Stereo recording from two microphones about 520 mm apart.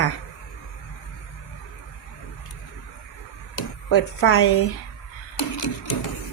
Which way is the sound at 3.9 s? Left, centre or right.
Left.